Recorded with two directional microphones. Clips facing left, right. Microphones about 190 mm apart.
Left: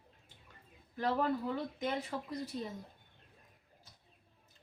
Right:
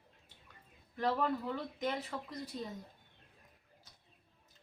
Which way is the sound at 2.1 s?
20° left (ahead or behind).